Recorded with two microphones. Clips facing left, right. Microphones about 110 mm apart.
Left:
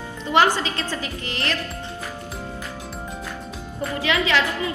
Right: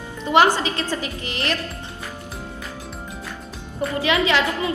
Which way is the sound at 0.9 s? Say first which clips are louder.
Right 2 dB; 20° right (ahead or behind).